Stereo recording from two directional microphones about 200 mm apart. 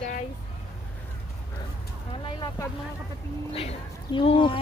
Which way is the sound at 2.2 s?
20° left (ahead or behind).